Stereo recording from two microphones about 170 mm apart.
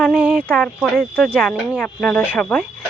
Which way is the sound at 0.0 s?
10° right (ahead or behind).